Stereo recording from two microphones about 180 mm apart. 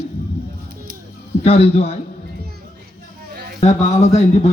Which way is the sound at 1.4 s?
35° left (ahead or behind).